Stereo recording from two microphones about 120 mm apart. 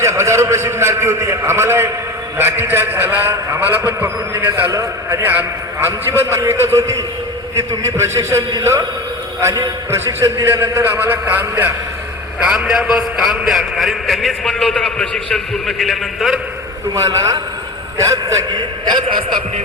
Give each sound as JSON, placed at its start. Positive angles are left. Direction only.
{"t": 0.0, "sound": "a man's voice", "side_deg": -25}
{"t": 12.5, "sound": "a man's voice", "side_deg": -5}
{"t": 16.9, "sound": "a man's voice", "side_deg": -25}